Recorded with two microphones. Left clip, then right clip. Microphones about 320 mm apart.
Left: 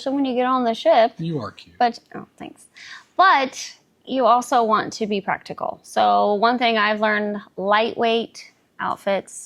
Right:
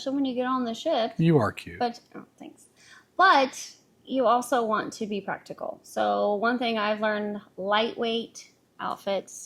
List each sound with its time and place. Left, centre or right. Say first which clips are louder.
0.0 s a woman's voice: left 7 dB; left
1.2 s speech: right 6 dB; right
1.8 s a woman's voice: left 10 dB; left